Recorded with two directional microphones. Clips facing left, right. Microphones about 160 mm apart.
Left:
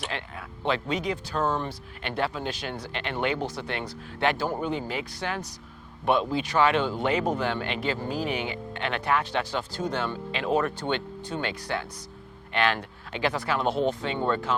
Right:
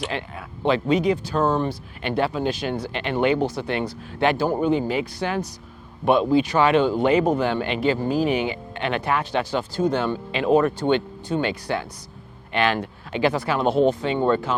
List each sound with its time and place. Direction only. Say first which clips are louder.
0.1 s speech: right 5 dB; 10° right (ahead or behind)